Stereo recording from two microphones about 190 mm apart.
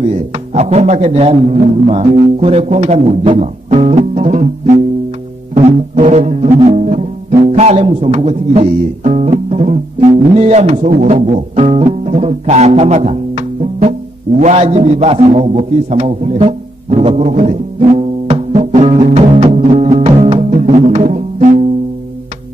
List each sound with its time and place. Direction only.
0.0 s speech: 35° right (ahead or behind)
5.5 s music: 35° right (ahead or behind)
6.6 s speech: 35° right (ahead or behind)
10.9 s music: 35° right (ahead or behind)
14.4 s a sound: 35° right (ahead or behind)